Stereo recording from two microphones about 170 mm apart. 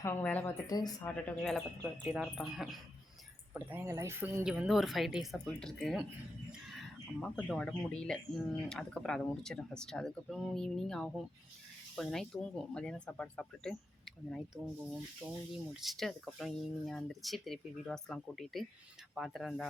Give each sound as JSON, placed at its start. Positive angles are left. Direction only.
{"t": 0.0, "sound": "a woman's voice", "side_deg": 10}
{"t": 0.7, "sound": "speech", "side_deg": 20}
{"t": 1.0, "sound": "speech", "side_deg": 5}
{"t": 3.5, "sound": "speech", "side_deg": -10}
{"t": 4.4, "sound": "speech", "side_deg": -5}
{"t": 6.7, "sound": "a sound", "side_deg": 0}
{"t": 7.4, "sound": "speech", "side_deg": 5}
{"t": 15.2, "sound": "speech", "side_deg": -15}
{"t": 15.7, "sound": "speech", "side_deg": 0}